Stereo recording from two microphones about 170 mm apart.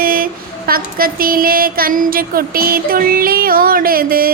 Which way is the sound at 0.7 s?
60° right (ahead or behind).